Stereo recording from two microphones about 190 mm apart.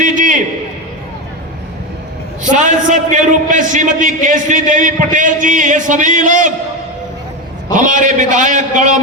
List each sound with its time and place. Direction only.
0.0 s a sound: 40° right (ahead or behind)
2.4 s a man's voice: 40° right (ahead or behind)
7.7 s a man's voice: 45° right (ahead or behind)